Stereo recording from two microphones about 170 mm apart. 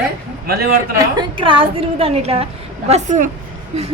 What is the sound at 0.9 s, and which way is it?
A woman's voice, 25° right (ahead or behind).